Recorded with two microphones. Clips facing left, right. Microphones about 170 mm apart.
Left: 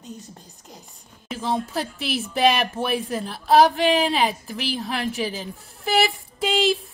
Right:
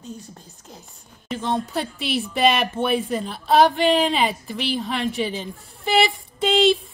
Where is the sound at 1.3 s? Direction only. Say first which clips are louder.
Right 1 dB; 5° left (ahead or behind).